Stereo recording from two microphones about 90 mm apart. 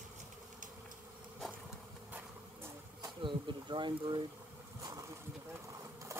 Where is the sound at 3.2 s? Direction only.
60° right (ahead or behind).